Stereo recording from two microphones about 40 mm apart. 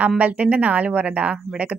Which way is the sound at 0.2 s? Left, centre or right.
Right.